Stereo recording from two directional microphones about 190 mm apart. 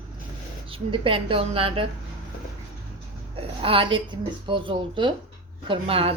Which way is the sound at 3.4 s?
30° right (ahead or behind).